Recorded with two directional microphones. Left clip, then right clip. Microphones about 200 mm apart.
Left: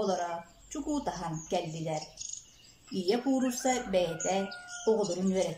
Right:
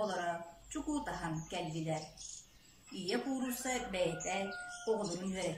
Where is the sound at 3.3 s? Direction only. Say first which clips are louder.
Left 10 dB; 60° left (ahead or behind).